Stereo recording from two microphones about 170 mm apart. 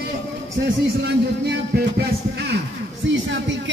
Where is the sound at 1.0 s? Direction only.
75° right (ahead or behind).